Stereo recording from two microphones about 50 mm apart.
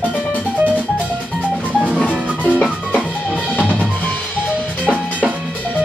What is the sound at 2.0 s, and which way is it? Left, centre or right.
Music, left.